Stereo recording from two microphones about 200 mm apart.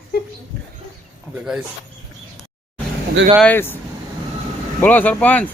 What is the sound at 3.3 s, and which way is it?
Speech, 5° left (ahead or behind).